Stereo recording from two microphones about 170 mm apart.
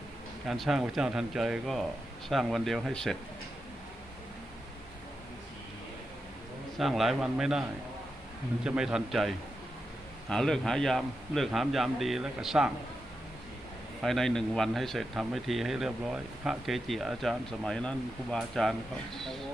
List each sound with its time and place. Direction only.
0.4 s speech: centre (ahead or behind)
6.7 s speech: centre (ahead or behind)
8.6 s speech: 5° right (ahead or behind)
14.0 s speech: centre (ahead or behind)